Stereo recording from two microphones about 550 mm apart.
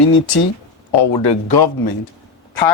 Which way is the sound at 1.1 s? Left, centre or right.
Left.